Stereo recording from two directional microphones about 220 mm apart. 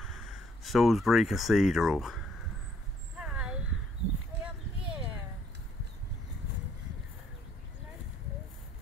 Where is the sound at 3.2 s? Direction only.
5° right (ahead or behind).